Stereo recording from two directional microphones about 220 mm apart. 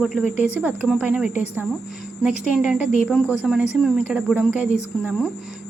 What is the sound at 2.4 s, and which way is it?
Speech, 5° right (ahead or behind).